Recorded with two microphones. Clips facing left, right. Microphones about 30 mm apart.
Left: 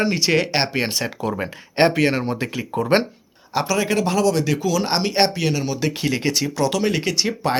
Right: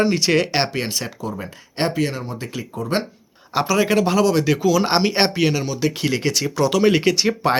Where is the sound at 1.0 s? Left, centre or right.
Left.